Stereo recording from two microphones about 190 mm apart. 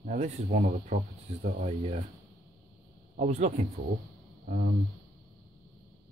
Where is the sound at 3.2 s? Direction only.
35° right (ahead or behind).